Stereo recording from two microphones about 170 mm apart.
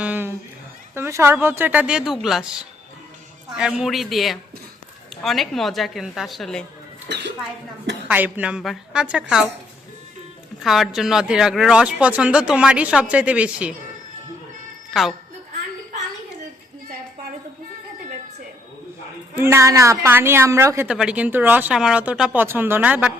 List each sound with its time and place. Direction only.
0.0 s a sound: 10° right (ahead or behind)
0.9 s a woman's voice: 15° right (ahead or behind); by 6.7 s centre (ahead or behind)
7.1 s a woman's voice: 90° right
8.0 s speech: 10° right (ahead or behind)
10.6 s speech: centre (ahead or behind)
14.8 s music: centre (ahead or behind)
19.4 s a woman's voice: 15° right (ahead or behind)